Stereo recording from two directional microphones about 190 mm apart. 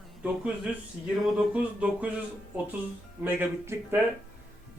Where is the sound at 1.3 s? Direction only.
5° right (ahead or behind).